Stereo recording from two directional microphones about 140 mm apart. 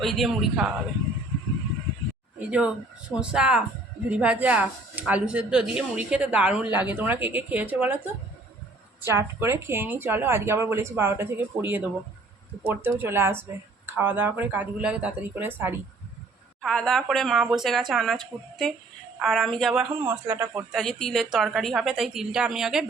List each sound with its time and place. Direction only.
0.0 s a woman's voice: centre (ahead or behind)
2.5 s speech: 10° right (ahead or behind)
16.6 s a woman's voice: centre (ahead or behind)
19.2 s a woman's voice: centre (ahead or behind)
20.1 s speech: 15° right (ahead or behind)
20.7 s a woman's voice: centre (ahead or behind)